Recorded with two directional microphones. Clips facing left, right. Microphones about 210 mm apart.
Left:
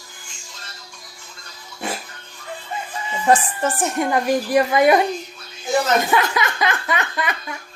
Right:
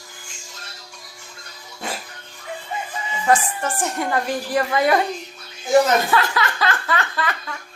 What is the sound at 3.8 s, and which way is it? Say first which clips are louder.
A woman's voice: left 2 dB; 20° left (ahead or behind).